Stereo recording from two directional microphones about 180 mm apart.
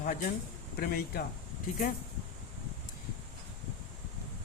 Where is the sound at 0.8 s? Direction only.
55° left (ahead or behind).